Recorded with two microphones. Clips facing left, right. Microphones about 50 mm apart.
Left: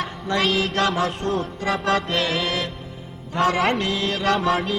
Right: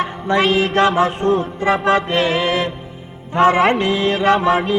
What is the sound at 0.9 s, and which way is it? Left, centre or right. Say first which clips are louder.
Music: right 7 dB; centre.